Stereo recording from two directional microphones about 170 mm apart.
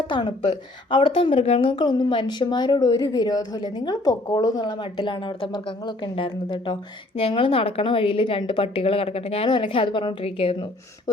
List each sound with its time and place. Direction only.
0.1 s a woman's voice: 30° left (ahead or behind)